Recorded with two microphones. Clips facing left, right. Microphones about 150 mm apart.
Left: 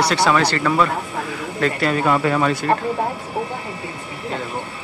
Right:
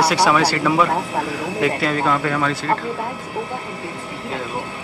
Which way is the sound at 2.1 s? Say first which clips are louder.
Left 2 dB; 20° left (ahead or behind).